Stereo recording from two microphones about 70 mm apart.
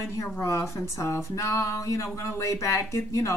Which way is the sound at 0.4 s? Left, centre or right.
Left.